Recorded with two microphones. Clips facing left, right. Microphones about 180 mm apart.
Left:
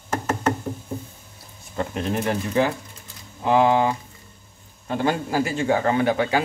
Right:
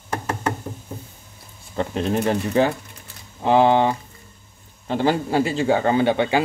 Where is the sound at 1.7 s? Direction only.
30° right (ahead or behind).